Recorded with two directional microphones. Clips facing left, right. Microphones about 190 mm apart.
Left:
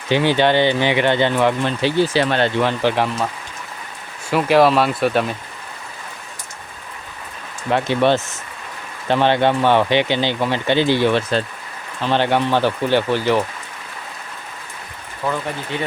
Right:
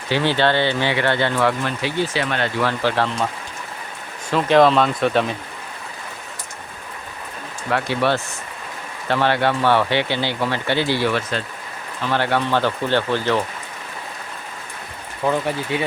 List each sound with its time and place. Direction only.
0.1 s speech: 15° left (ahead or behind)
4.3 s speech: 10° left (ahead or behind)
7.7 s speech: 20° left (ahead or behind)
15.2 s speech: 15° right (ahead or behind)